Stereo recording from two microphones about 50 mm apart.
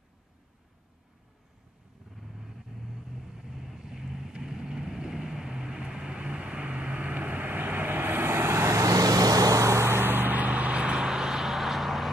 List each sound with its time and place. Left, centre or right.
2.3 s vehicle: centre; by 9.9 s right
9.9 s vehicle: right; by 12.1 s centre